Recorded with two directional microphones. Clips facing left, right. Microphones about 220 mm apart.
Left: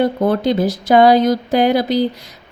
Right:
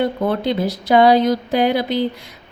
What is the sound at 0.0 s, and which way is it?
Speech, 40° left (ahead or behind).